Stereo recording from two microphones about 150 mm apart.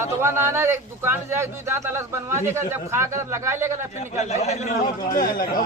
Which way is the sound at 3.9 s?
50° left (ahead or behind).